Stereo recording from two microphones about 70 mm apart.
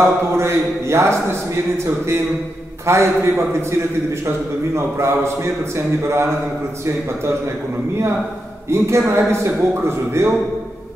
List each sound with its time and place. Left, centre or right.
0.0 s a man's voice: right
2.9 s a man's voice: right
4.7 s a man's voice: right
8.6 s a man's voice: right